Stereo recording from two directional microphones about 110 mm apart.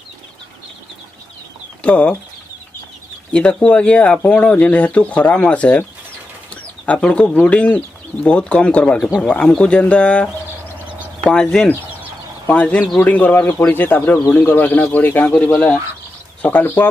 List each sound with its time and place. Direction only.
1.8 s speech: 10° left (ahead or behind)
3.3 s speech: 10° left (ahead or behind)
12.4 s speech: 15° left (ahead or behind)